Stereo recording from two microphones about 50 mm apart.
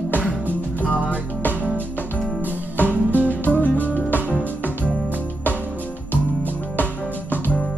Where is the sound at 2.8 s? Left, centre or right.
Left.